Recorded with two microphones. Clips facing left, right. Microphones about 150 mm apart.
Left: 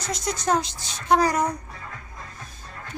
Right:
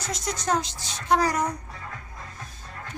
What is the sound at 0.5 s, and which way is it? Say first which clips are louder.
Speech: left 2 dB; 15° left (ahead or behind).